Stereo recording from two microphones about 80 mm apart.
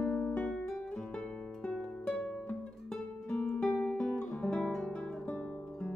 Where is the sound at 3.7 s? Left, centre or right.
Centre.